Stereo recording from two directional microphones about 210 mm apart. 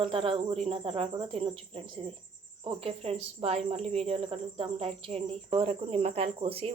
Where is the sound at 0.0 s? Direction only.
25° right (ahead or behind).